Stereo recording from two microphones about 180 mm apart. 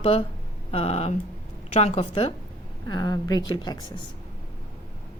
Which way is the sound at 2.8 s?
20° left (ahead or behind).